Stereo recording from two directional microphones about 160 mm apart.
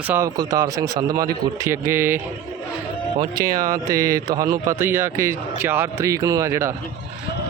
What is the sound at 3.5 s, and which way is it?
A man's voice, 20° right (ahead or behind).